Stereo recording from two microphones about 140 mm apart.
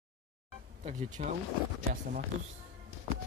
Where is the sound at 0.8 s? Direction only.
65° right (ahead or behind).